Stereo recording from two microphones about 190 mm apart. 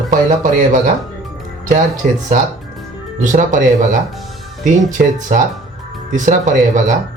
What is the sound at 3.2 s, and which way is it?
Speech, 45° right (ahead or behind).